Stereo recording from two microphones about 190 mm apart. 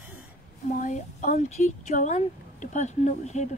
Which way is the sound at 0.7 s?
40° left (ahead or behind).